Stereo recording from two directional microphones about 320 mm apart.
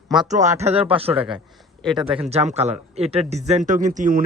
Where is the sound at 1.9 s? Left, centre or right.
Centre.